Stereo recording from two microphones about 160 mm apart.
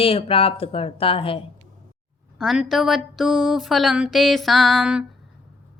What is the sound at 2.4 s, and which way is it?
Speech, centre (ahead or behind).